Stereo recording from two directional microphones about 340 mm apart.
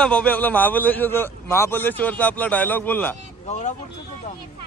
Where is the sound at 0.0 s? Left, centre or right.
Centre.